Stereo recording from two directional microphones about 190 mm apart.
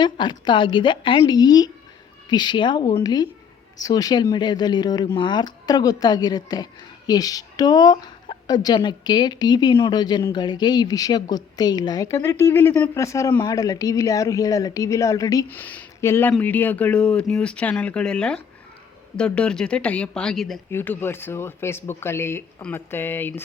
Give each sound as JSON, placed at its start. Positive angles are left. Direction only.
{"t": 0.0, "sound": "a woman's voice", "side_deg": 25}